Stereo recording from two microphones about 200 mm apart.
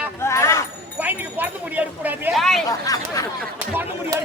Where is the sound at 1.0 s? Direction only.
10° right (ahead or behind).